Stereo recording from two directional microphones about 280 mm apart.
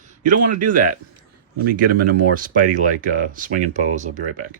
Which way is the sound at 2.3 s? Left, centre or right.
Right.